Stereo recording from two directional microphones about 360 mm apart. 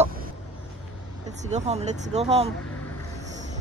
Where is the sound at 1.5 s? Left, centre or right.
Centre.